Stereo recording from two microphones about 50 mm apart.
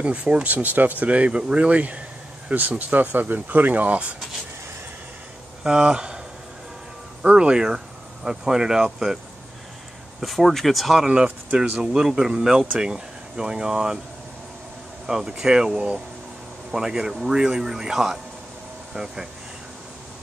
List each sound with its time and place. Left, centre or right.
0.0 s speech: right
5.6 s speech: centre
7.3 s speech: centre
10.2 s speech: centre
15.0 s speech: centre
18.9 s speech: centre